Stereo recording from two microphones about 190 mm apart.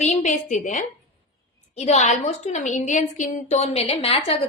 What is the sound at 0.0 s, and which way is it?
A woman's voice, 40° left (ahead or behind).